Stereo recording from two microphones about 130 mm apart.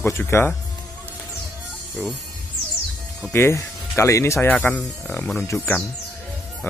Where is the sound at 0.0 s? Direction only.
20° left (ahead or behind).